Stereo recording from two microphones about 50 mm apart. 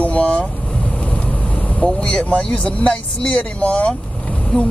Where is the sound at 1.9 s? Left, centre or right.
Centre.